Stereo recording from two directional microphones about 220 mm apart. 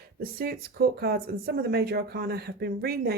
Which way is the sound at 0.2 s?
45° right (ahead or behind).